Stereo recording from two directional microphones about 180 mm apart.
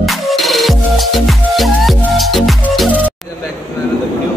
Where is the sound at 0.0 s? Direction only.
Centre (ahead or behind).